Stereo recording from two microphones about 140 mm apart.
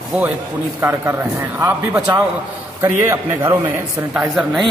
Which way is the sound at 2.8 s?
20° right (ahead or behind).